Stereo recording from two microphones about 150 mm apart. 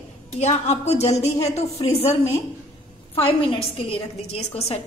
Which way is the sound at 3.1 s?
40° left (ahead or behind).